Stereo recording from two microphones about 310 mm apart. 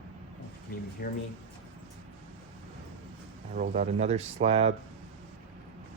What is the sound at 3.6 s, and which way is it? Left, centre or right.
Speech, right.